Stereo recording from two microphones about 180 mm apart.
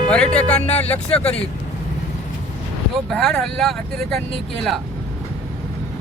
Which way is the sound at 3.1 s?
Centre (ahead or behind).